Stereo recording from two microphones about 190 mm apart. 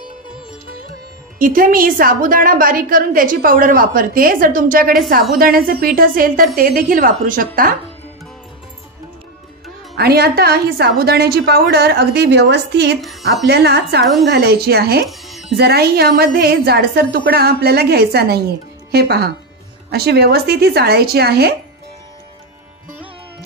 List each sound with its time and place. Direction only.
1.4 s a woman's voice: 50° right (ahead or behind)
9.9 s a woman's voice: 55° right (ahead or behind)
15.0 s music: centre (ahead or behind)
15.5 s a woman's voice: 60° right (ahead or behind)